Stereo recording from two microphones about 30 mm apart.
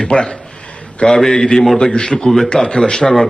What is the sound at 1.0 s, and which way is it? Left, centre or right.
Speech, centre.